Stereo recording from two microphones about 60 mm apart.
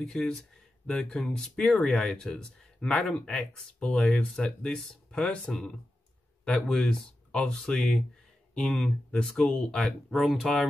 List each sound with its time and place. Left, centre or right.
0.0 s speech: centre